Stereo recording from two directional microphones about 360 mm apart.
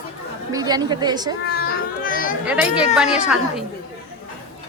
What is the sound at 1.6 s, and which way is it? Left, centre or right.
Music, left.